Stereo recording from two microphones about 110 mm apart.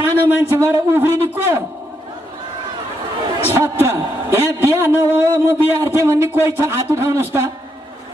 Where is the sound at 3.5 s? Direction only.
20° right (ahead or behind).